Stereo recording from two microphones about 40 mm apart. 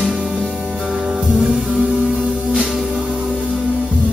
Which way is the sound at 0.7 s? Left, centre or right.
Centre.